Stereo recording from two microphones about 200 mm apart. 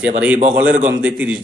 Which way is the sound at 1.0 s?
5° right (ahead or behind).